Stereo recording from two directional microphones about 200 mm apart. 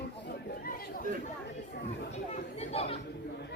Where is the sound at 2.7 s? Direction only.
30° left (ahead or behind).